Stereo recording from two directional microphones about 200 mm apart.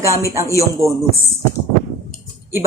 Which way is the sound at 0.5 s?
15° right (ahead or behind).